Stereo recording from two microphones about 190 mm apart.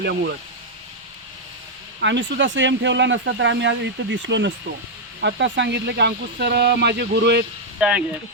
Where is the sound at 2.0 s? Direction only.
70° right (ahead or behind).